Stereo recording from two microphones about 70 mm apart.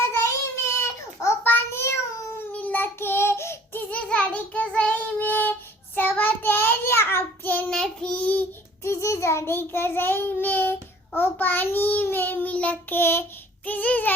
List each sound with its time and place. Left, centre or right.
0.7 s baby cry: left
1.5 s child singing: left
2.5 s child singing: left
7.7 s child singing: centre
8.8 s child singing: left
13.7 s babbling: left